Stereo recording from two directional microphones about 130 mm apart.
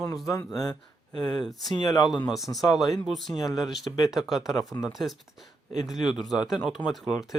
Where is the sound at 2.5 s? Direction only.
Centre (ahead or behind).